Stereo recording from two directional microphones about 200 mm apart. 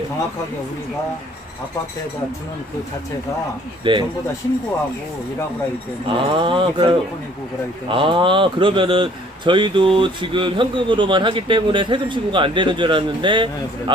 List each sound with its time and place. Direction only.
3.9 s speech: 25° right (ahead or behind)
6.1 s speech: 25° right (ahead or behind)